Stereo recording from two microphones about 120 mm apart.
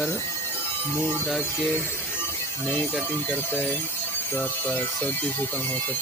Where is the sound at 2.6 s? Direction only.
15° left (ahead or behind).